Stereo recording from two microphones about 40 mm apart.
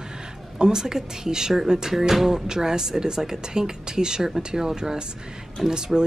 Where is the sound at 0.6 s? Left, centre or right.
Centre.